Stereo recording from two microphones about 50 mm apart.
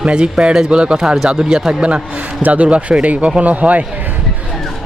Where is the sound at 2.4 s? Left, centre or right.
Right.